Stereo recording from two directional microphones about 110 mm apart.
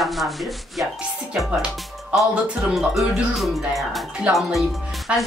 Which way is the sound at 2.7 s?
Centre (ahead or behind).